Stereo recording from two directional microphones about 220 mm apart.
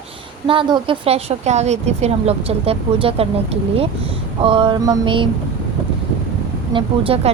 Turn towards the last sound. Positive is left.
turn(degrees=-25)  # may be behind; listen again after turning